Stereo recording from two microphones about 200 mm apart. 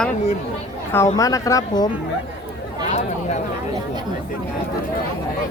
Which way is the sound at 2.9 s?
35° left (ahead or behind).